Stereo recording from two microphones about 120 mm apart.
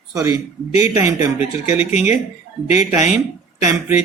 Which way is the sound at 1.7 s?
75° left (ahead or behind).